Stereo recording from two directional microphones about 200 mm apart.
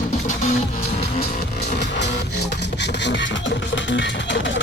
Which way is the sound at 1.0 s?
30° left (ahead or behind).